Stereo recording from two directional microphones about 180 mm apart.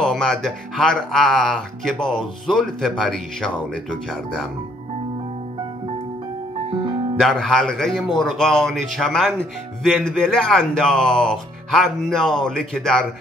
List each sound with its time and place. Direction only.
0.0 s speech: 5° left (ahead or behind)
6.7 s music: 25° right (ahead or behind)
7.2 s speech: centre (ahead or behind)